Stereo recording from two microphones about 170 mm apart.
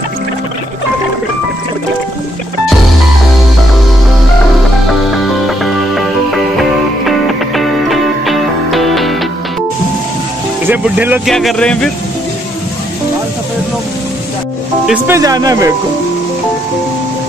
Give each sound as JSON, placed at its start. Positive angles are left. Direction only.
{"t": 5.1, "sound": "music", "side_deg": 0}
{"t": 10.7, "sound": "speech", "side_deg": -10}
{"t": 11.2, "sound": "a man's voice", "side_deg": 5}
{"t": 14.9, "sound": "speech", "side_deg": -15}